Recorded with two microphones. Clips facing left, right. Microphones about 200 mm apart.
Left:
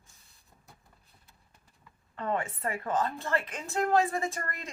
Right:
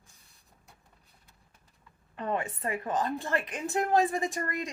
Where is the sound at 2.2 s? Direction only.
20° right (ahead or behind).